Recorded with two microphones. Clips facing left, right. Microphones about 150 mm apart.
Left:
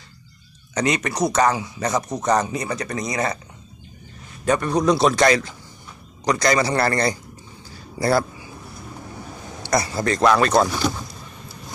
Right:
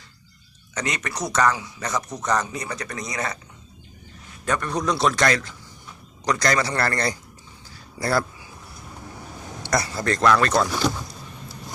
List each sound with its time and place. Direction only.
0.8 s speech: 20° left (ahead or behind)
3.1 s speech: 30° left (ahead or behind)
4.4 s speech: 20° left (ahead or behind)
9.8 s speech: 5° left (ahead or behind)
10.7 s speech: centre (ahead or behind)